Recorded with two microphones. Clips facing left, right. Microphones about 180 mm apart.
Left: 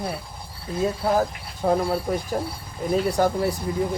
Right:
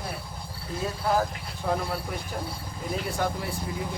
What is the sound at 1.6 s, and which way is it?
Speech, 45° left (ahead or behind).